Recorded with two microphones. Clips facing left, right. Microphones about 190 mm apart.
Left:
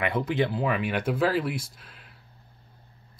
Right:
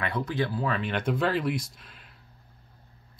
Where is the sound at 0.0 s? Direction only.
20° left (ahead or behind); by 2.0 s centre (ahead or behind).